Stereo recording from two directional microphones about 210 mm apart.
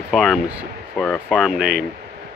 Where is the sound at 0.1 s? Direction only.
Centre (ahead or behind).